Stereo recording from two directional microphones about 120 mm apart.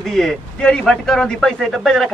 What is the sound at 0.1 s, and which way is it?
A man's voice, 5° left (ahead or behind).